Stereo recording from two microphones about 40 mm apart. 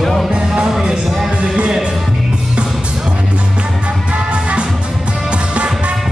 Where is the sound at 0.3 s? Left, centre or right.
Right.